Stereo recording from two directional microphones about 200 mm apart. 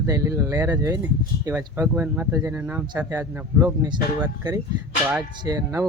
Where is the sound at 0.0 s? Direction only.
15° right (ahead or behind).